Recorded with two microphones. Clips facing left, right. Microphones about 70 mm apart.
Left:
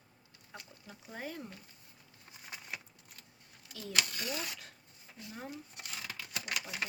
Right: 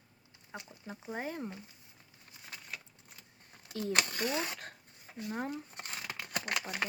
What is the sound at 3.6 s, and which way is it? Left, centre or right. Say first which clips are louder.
Speech: right 4 dB; right.